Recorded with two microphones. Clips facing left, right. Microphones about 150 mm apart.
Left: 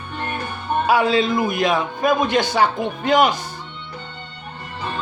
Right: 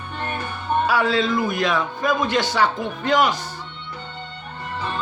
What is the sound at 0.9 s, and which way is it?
Speech, 15° left (ahead or behind).